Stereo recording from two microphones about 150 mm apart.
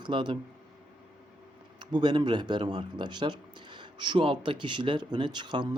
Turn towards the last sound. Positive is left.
turn(degrees=-30)  # may be behind; listen again after turning